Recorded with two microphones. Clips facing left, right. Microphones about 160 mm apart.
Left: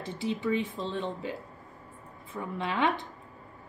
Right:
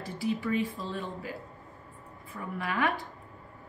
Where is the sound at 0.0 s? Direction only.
20° left (ahead or behind).